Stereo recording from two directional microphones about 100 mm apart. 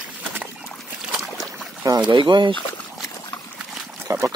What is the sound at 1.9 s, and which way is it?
Speech, 50° right (ahead or behind).